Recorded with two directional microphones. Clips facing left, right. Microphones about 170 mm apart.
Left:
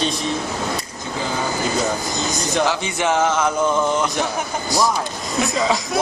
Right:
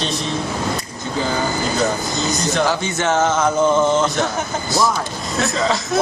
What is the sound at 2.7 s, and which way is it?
Speech, 10° left (ahead or behind).